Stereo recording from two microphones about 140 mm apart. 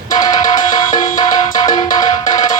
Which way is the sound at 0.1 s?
30° left (ahead or behind).